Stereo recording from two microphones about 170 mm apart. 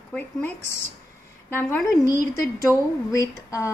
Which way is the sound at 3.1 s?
20° left (ahead or behind).